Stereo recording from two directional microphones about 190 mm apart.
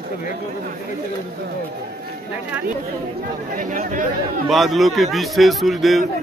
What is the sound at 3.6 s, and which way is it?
Speech, 45° right (ahead or behind).